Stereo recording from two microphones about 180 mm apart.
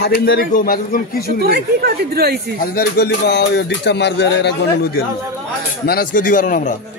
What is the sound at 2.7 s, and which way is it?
Speech, 60° left (ahead or behind).